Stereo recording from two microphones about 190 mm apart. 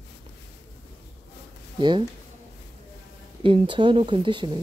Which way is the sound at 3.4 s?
25° right (ahead or behind).